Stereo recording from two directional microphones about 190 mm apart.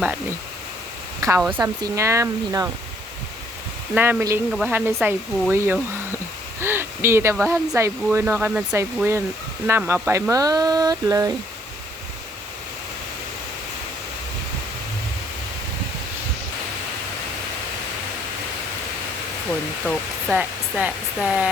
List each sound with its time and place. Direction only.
1.4 s speech: 10° right (ahead or behind)
3.9 s speech: 10° right (ahead or behind)
20.3 s speech: 5° right (ahead or behind)